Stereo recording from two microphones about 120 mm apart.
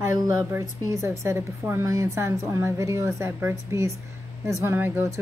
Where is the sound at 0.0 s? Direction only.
20° right (ahead or behind).